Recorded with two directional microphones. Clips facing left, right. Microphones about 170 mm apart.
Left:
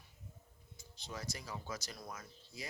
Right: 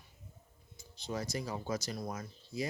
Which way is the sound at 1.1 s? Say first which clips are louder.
Right 8 dB; 40° right (ahead or behind).